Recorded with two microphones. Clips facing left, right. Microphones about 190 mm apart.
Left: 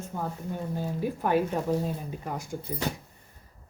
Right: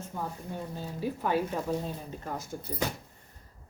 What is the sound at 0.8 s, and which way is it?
A woman's voice, 15° left (ahead or behind).